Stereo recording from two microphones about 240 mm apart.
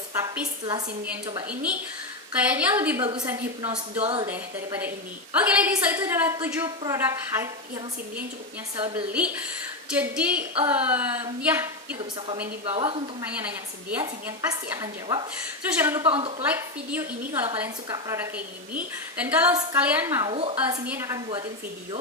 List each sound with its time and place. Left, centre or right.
0.1 s a woman's voice: centre
4.0 s a woman's voice: right
4.3 s a woman's voice: centre
8.7 s a woman's voice: right
9.1 s a woman's voice: centre
12.6 s a woman's voice: right
13.9 s a woman's voice: centre
16.0 s a woman's voice: right
16.4 s a woman's voice: centre
20.3 s a woman's voice: right